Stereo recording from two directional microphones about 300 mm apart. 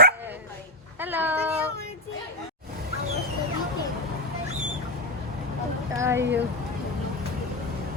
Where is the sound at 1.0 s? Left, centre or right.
Centre.